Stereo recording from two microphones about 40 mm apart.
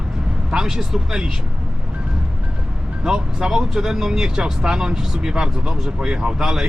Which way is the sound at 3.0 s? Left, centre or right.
Centre.